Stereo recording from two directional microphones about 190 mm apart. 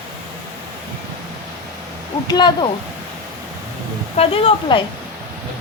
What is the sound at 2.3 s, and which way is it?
Speech, 20° left (ahead or behind).